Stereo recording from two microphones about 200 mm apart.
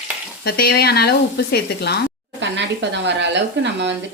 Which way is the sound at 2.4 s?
60° right (ahead or behind).